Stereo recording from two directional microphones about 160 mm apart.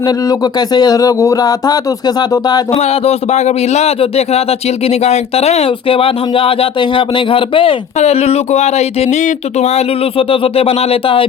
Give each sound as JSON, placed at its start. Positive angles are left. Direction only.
{"t": 0.0, "sound": "speech", "side_deg": 25}
{"t": 2.7, "sound": "speech", "side_deg": 40}